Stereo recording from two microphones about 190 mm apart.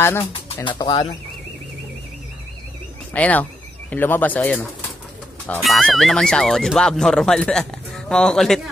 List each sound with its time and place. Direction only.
0.0 s speech: 15° left (ahead or behind)
0.7 s speech: 25° left (ahead or behind)
3.1 s speech: 10° left (ahead or behind)